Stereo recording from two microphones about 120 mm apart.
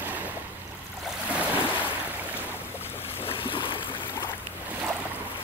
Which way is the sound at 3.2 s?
50° left (ahead or behind).